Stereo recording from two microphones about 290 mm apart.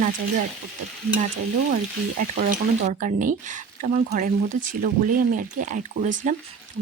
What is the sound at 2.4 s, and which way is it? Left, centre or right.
Speech, right.